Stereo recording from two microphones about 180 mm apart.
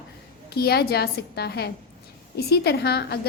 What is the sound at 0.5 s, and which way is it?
A woman's voice, 60° left (ahead or behind).